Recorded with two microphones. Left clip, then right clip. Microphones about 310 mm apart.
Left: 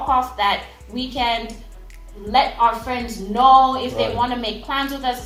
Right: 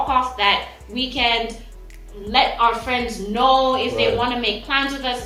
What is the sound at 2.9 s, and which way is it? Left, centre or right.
A woman's voice, left.